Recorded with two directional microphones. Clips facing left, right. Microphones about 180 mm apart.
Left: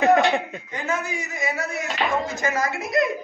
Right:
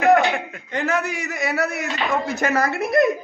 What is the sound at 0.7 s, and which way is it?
A man's voice, 70° right (ahead or behind).